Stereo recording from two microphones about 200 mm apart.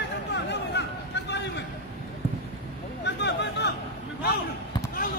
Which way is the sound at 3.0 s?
60° left (ahead or behind).